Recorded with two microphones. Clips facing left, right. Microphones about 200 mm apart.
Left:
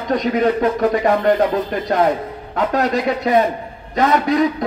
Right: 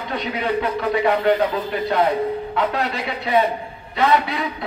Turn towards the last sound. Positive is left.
turn(degrees=45)  # may be behind; listen again after turning